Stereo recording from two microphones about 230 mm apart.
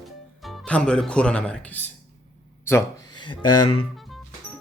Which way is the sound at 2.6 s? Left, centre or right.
Centre.